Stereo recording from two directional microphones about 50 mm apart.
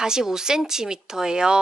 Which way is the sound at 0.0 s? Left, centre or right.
Centre.